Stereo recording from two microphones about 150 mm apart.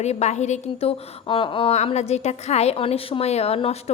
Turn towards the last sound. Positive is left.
turn(degrees=45)  # may be behind; listen again after turning